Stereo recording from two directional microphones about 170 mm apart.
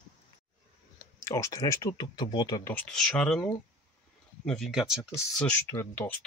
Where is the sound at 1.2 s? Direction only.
20° left (ahead or behind).